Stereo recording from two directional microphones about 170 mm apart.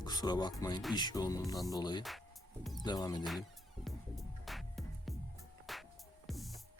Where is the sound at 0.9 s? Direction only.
25° left (ahead or behind).